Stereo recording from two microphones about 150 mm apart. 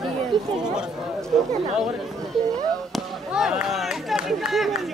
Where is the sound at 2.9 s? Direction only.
Centre (ahead or behind).